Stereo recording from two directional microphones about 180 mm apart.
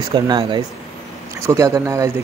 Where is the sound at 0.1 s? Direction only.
25° right (ahead or behind).